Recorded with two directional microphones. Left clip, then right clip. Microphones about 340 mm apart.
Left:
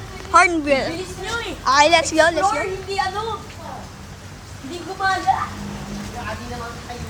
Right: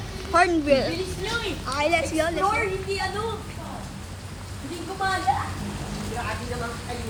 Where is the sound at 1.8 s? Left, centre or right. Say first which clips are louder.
Left 8 dB; left.